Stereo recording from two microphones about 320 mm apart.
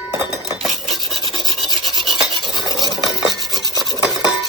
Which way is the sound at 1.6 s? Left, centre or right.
Centre.